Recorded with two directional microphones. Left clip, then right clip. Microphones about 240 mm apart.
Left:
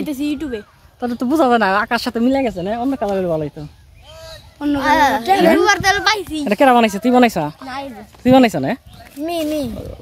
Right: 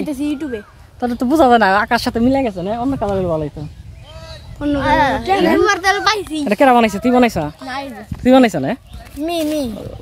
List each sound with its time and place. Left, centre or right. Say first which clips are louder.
0.0 s speech: right 1 dB; centre
0.9 s speech: right 3 dB; centre
4.3 s a woman's voice: right 1 dB; left
6.3 s speech: right 1 dB; centre
7.6 s speech: right 2 dB; centre